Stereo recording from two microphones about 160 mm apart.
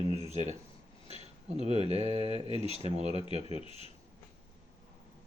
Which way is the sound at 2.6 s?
45° right (ahead or behind).